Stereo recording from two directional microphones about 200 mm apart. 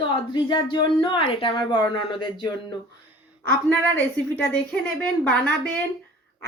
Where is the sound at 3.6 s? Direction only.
10° left (ahead or behind).